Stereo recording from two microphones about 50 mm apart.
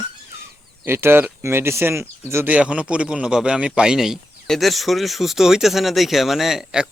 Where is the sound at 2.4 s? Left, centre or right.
Right.